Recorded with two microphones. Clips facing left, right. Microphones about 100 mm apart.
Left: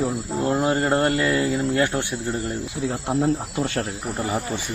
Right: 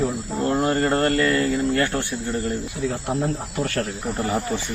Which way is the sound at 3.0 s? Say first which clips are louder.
Left 3 dB; 20° left (ahead or behind).